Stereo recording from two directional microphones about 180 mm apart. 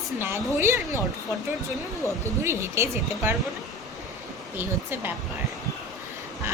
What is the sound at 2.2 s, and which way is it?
A woman's voice, 15° right (ahead or behind).